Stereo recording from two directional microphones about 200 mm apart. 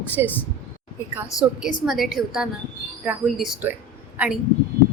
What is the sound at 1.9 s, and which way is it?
A woman's voice, centre (ahead or behind).